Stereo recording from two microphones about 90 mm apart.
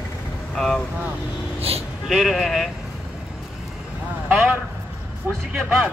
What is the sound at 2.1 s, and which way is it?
Speech, centre (ahead or behind).